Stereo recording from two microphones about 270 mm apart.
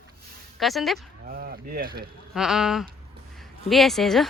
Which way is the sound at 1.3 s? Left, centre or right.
Right.